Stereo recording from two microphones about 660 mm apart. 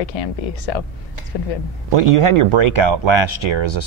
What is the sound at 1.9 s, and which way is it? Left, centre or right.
Speech, right.